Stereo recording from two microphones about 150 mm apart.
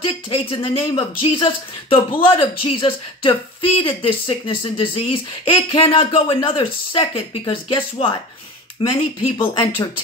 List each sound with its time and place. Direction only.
0.0 s speech: 35° left (ahead or behind)